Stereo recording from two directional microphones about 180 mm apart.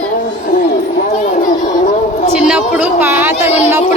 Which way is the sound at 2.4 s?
5° right (ahead or behind).